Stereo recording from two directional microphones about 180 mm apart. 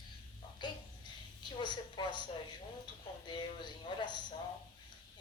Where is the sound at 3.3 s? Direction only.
25° left (ahead or behind).